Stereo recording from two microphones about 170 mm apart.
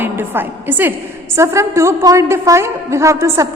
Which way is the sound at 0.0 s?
10° right (ahead or behind).